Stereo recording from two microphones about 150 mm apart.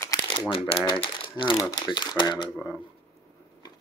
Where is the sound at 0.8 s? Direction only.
35° left (ahead or behind).